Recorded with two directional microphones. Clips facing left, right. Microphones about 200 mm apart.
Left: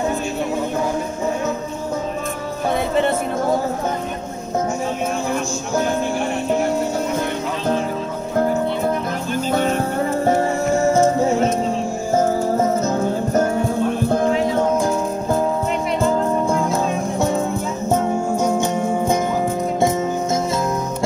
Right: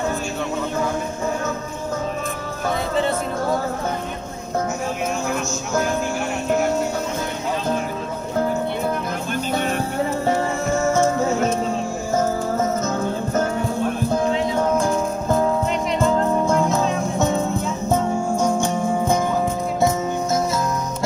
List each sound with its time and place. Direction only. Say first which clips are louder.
10.2 s music: left 3 dB; 40° left (ahead or behind)
12.2 s music: left 4 dB; 35° left (ahead or behind)